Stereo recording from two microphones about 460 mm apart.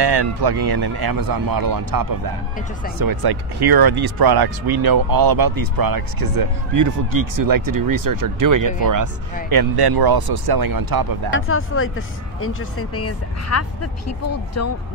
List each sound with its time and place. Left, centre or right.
0.0 s speech: right
9.5 s speech: right
11.3 s speech: left